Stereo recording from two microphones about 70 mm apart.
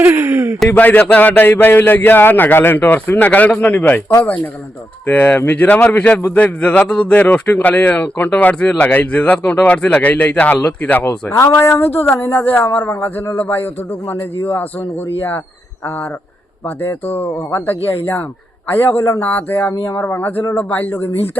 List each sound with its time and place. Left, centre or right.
0.2 s speech: right
0.7 s a man's voice: left
5.0 s a man's voice: left
11.3 s a man's voice: left
16.6 s a man's voice: left